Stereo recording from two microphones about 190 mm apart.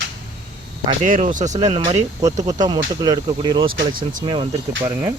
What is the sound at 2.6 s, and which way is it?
Speech, 20° right (ahead or behind).